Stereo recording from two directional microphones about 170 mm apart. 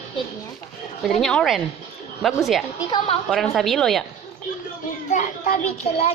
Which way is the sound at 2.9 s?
30° left (ahead or behind).